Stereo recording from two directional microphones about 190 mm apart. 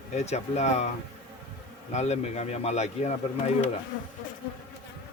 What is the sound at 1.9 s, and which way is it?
Speech, 35° left (ahead or behind).